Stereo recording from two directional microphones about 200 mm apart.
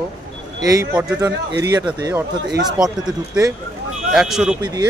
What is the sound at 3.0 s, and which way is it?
Speech, 15° right (ahead or behind).